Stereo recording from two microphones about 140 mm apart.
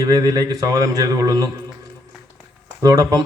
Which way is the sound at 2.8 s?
25° right (ahead or behind).